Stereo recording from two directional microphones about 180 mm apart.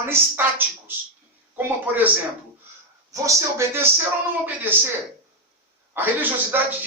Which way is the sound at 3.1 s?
15° right (ahead or behind).